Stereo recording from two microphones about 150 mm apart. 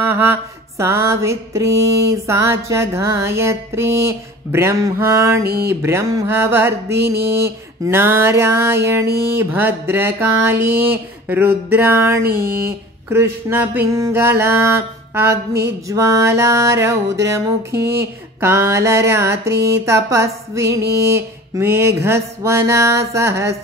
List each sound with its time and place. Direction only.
0.1 s mantra: 15° right (ahead or behind)
5.4 s speech: 90° right
5.8 s a sound: 15° right (ahead or behind)
15.9 s mantra: 20° right (ahead or behind)
21.1 s a sound: 15° right (ahead or behind)
22.7 s mantra: 20° right (ahead or behind)